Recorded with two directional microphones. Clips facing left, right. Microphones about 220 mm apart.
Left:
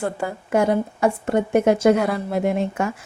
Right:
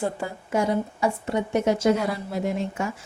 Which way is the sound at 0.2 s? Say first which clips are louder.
Left 5 dB; 60° left (ahead or behind).